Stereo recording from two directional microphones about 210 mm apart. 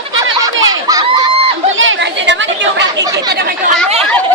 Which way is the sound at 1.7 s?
65° right (ahead or behind).